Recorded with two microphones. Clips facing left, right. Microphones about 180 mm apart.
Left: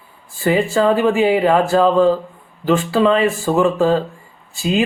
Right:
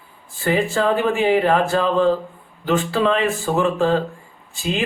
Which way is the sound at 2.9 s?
Centre (ahead or behind).